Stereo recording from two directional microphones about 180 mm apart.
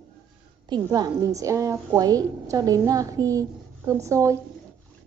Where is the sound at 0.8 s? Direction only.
20° right (ahead or behind).